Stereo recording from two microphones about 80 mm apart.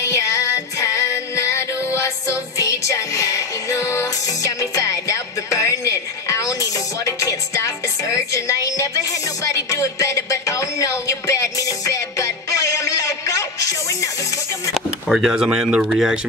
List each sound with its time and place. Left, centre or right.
0.0 s music: left
15.0 s speech: centre